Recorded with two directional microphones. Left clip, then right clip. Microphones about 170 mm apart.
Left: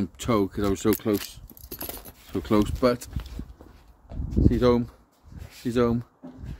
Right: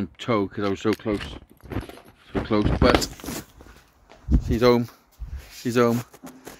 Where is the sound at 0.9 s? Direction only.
25° left (ahead or behind).